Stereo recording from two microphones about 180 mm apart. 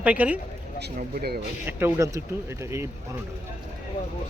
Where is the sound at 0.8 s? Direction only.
60° right (ahead or behind).